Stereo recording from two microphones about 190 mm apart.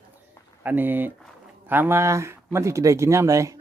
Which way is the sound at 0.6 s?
10° right (ahead or behind).